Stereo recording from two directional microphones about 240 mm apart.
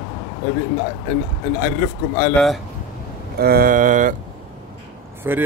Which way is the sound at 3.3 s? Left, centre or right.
Right.